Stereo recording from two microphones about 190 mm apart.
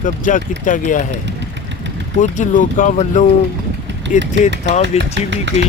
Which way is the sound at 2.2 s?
40° left (ahead or behind).